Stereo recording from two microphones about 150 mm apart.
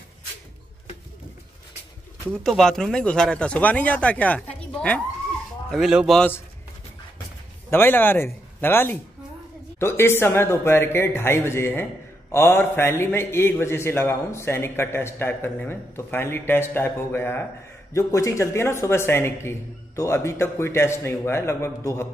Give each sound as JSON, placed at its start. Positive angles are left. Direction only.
{"t": 2.3, "sound": "speech", "side_deg": 5}
{"t": 5.7, "sound": "a man's voice", "side_deg": -5}
{"t": 7.7, "sound": "speech", "side_deg": 15}